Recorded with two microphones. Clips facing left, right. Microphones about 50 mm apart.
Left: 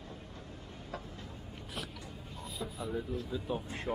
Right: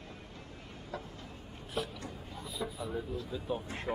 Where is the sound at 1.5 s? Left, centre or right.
Right.